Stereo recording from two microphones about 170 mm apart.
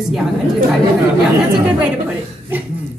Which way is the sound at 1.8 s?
5° right (ahead or behind).